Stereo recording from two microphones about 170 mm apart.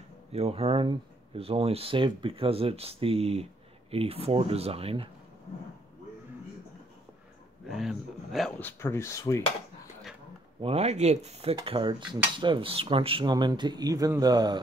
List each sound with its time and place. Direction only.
0.3 s speech: 35° right (ahead or behind)
7.6 s speech: centre (ahead or behind)
8.5 s speech: 10° left (ahead or behind)
10.6 s speech: 40° right (ahead or behind)